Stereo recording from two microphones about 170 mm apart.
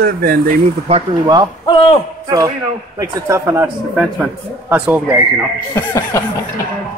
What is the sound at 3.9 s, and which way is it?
Speech, 5° right (ahead or behind).